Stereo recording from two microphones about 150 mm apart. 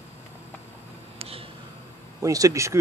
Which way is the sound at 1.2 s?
40° right (ahead or behind).